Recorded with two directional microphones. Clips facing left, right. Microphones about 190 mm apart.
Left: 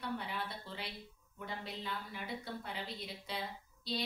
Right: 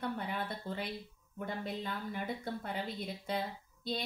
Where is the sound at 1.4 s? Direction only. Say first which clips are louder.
Right 5 dB; 50° right (ahead or behind).